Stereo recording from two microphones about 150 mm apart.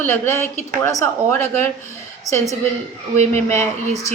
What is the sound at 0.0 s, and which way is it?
A woman's voice, 15° left (ahead or behind).